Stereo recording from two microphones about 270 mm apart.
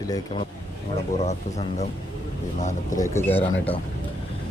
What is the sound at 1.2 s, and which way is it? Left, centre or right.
Speech, left.